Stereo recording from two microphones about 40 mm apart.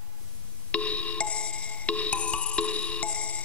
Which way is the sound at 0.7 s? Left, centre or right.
Left.